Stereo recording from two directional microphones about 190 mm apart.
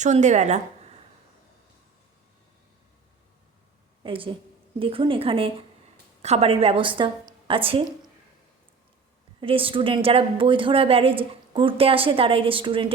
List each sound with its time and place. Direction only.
0.0 s speech: 40° right (ahead or behind)
4.0 s a woman's voice: 25° right (ahead or behind)
9.4 s a woman's voice: 30° right (ahead or behind)